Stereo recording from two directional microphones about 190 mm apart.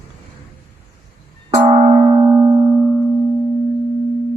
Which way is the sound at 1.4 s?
30° right (ahead or behind).